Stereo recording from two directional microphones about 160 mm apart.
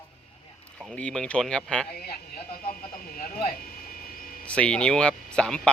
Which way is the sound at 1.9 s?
75° left (ahead or behind).